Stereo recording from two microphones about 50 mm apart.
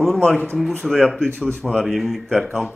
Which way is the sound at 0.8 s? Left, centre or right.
Centre.